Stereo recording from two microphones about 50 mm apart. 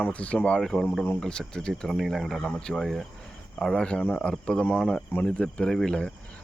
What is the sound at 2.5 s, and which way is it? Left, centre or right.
Speech, centre.